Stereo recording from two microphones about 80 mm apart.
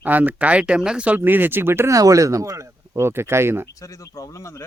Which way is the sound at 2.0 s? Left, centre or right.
Right.